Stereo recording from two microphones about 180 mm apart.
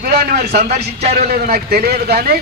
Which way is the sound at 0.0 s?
55° right (ahead or behind).